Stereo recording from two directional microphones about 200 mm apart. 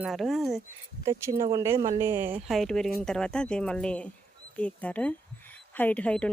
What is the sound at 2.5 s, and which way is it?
A woman's voice, centre (ahead or behind).